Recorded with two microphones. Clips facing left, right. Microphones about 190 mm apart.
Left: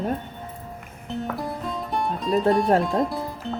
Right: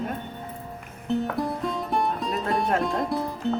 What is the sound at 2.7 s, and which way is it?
Speech, centre (ahead or behind).